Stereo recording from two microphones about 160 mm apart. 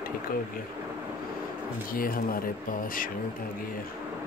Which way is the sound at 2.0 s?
65° left (ahead or behind).